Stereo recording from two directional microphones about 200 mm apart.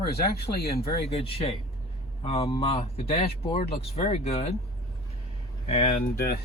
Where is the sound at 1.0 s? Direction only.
30° left (ahead or behind).